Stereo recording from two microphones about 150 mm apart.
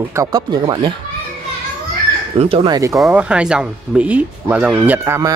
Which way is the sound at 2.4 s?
40° right (ahead or behind).